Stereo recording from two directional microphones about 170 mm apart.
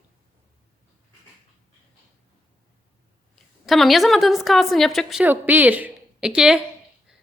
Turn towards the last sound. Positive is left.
turn(degrees=-5)  # may be behind; listen again after turning